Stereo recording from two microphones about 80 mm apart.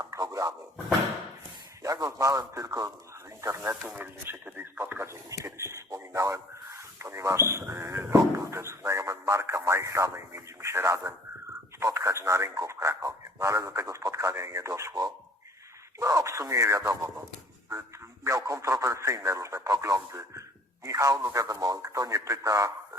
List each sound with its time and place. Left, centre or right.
0.0 s a sound: right
1.8 s speech: right
3.8 s speech: right
5.3 s speech: right